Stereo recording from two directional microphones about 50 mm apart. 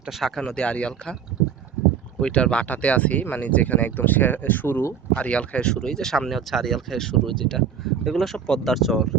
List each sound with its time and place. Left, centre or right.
0.2 s speech: centre
0.5 s speech: left
2.2 s speech: left
5.1 s speech: left
8.7 s speech: centre